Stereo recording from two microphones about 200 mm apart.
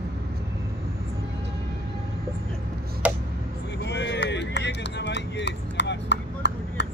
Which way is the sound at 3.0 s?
5° right (ahead or behind).